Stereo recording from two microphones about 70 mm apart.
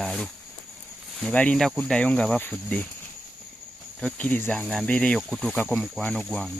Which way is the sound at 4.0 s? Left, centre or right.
Left.